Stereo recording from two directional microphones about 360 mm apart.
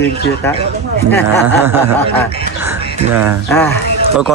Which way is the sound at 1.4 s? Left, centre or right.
Centre.